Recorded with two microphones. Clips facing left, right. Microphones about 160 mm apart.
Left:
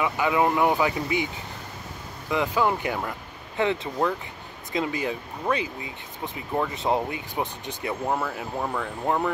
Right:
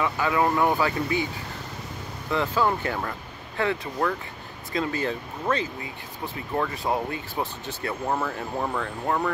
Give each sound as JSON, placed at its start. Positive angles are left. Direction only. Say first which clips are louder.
{"t": 0.0, "sound": "speech", "louder": "left 1 dB", "side_deg": 15}
{"t": 2.3, "sound": "speech", "louder": "even", "side_deg": 15}
{"t": 8.2, "sound": "speech", "louder": "right 1 dB", "side_deg": 0}
{"t": 9.0, "sound": "speech", "louder": "left 1 dB", "side_deg": 15}